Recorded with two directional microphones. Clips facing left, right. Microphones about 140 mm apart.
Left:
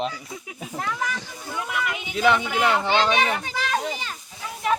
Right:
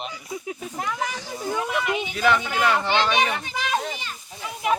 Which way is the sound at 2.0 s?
20° left (ahead or behind).